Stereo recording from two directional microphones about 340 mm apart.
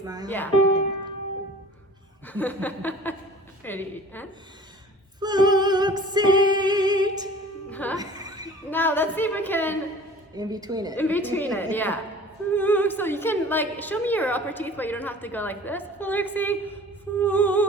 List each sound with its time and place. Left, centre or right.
0.0 s a woman's voice: centre
0.3 s a woman's voice: centre
2.2 s a woman's voice: centre
5.2 s female singing: centre
7.7 s speech: centre
7.9 s music: centre
8.7 s a woman's voice: centre
10.3 s a woman's voice: centre
10.9 s a woman's voice: centre